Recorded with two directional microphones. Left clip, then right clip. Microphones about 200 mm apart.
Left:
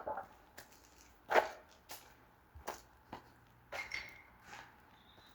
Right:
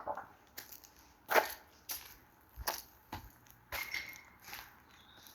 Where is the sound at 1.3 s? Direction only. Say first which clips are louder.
Right 1 dB; 50° right (ahead or behind).